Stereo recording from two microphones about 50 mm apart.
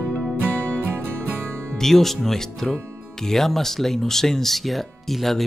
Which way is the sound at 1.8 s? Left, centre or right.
Centre.